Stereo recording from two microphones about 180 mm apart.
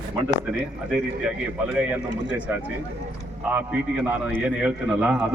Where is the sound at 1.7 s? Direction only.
5° right (ahead or behind).